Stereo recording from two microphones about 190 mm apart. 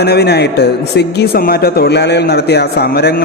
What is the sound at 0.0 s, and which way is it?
A man's voice, 60° left (ahead or behind).